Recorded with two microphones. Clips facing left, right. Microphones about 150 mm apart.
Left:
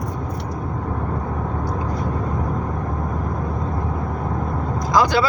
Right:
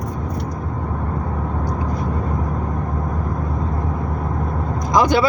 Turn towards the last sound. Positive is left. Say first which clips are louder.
# right 1 dB
turn(degrees=-20)  # may be behind; listen again after turning